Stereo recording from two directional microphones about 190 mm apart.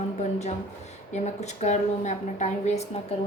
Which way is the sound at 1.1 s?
35° left (ahead or behind).